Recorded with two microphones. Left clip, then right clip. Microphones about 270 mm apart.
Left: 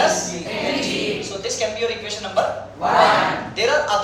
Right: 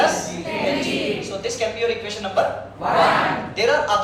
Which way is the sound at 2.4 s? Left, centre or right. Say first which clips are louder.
Even; centre.